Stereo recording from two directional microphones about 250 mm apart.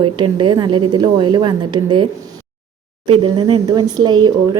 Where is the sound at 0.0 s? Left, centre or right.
Centre.